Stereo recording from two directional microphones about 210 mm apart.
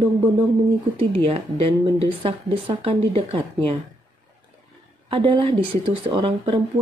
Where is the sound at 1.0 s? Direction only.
25° right (ahead or behind).